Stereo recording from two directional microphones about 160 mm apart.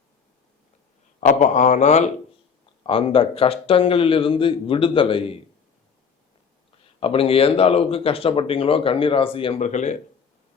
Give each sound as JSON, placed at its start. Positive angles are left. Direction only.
{"t": 1.2, "sound": "a man's voice", "side_deg": 50}
{"t": 2.8, "sound": "speech", "side_deg": 35}
{"t": 7.0, "sound": "speech", "side_deg": 35}
{"t": 9.6, "sound": "a man's voice", "side_deg": 50}